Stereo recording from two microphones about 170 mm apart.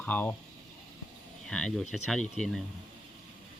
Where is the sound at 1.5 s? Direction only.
5° left (ahead or behind).